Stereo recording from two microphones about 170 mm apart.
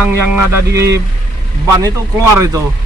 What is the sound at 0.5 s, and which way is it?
Speech, 15° right (ahead or behind).